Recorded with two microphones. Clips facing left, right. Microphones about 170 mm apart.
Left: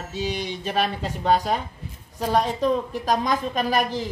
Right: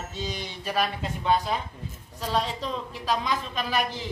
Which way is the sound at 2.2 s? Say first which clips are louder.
Left 7 dB; 50° left (ahead or behind).